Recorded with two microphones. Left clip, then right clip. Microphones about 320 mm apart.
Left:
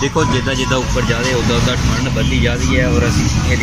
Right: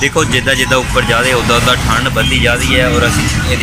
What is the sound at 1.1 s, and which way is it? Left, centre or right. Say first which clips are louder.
Speech: right 6 dB; right.